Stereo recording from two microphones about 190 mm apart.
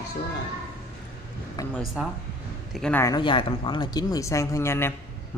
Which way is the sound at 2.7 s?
5° left (ahead or behind).